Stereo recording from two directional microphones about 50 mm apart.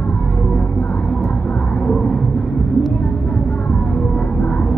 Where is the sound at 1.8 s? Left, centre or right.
Centre.